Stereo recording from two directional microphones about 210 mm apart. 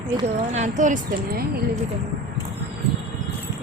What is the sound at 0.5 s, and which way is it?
Speech, 35° right (ahead or behind).